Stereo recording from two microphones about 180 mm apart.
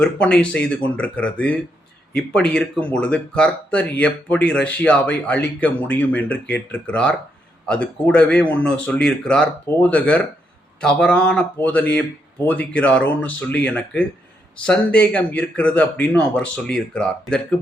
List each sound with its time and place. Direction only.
0.0 s speech: 5° left (ahead or behind)